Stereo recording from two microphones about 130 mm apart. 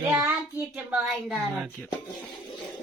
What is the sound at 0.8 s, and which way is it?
Speech, 5° right (ahead or behind).